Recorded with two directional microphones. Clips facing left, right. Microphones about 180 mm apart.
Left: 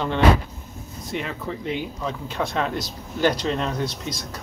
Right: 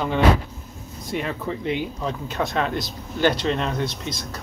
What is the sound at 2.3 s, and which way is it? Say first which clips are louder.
Speech: right 1 dB; centre (ahead or behind).